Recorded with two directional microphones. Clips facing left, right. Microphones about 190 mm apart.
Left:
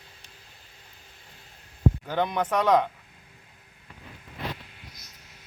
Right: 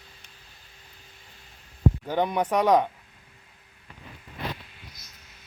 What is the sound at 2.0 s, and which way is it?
Speech, 15° right (ahead or behind).